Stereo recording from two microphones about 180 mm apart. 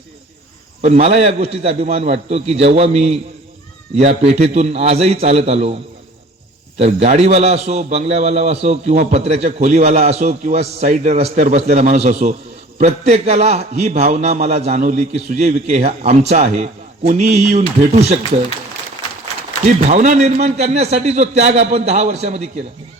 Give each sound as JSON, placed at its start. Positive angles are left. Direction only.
{"t": 0.8, "sound": "a man's voice", "side_deg": -35}
{"t": 6.7, "sound": "a man's voice", "side_deg": -35}
{"t": 19.9, "sound": "a man's voice", "side_deg": -40}